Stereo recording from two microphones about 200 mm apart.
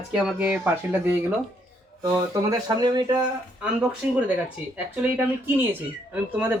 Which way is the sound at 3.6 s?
5° right (ahead or behind).